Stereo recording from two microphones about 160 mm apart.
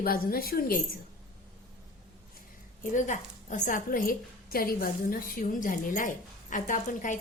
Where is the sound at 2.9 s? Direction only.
50° left (ahead or behind).